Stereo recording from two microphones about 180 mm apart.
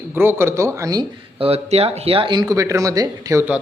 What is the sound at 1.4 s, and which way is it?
Speech, 35° right (ahead or behind).